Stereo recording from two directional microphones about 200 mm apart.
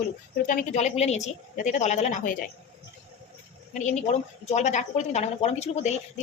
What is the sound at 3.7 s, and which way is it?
A woman's voice, 35° left (ahead or behind).